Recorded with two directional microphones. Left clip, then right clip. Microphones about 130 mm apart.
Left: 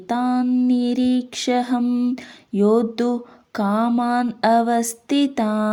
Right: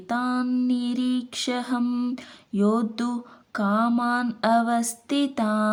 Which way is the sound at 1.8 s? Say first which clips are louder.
Left 5 dB; 10° left (ahead or behind).